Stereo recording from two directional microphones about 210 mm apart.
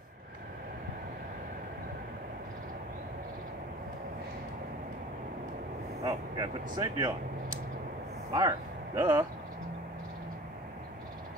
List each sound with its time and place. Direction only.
6.0 s speech: 20° right (ahead or behind)
8.4 s speech: 15° right (ahead or behind)